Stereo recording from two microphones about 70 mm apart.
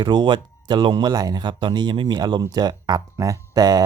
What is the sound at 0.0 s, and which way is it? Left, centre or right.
Speech, right.